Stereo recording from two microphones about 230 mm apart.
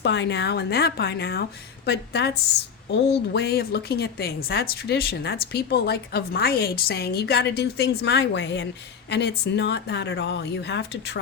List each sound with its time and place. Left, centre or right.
0.0 s speech: left